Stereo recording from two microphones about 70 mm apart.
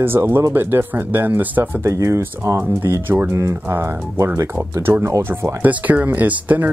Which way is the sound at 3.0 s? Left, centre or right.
Right.